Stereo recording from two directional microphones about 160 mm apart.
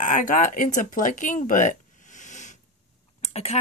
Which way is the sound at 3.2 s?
40° left (ahead or behind).